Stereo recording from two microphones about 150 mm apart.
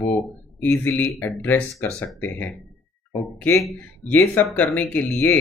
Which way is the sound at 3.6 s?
10° left (ahead or behind).